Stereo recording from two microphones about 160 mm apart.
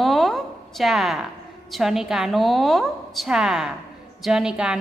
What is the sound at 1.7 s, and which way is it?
A woman's voice, centre (ahead or behind).